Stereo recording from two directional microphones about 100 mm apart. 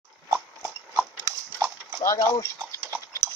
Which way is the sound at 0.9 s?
30° right (ahead or behind).